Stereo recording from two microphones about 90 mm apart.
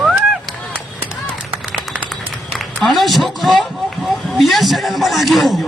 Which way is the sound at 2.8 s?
Centre (ahead or behind).